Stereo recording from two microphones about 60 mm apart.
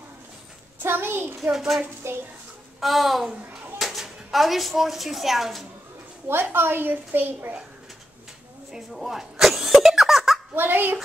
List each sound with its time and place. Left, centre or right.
0.8 s a child's voice: right
1.4 s a child's voice: centre
2.0 s a child's voice: right
2.8 s a child's voice: centre
6.2 s a child's voice: right
8.7 s speech: centre
10.5 s a child's voice: right